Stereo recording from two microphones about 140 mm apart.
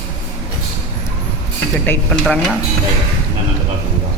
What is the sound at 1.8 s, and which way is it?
Speech, 15° left (ahead or behind).